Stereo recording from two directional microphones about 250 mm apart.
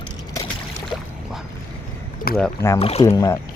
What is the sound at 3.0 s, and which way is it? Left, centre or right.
Speech, centre.